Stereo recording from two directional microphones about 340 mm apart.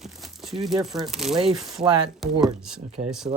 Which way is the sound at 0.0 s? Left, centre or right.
Centre.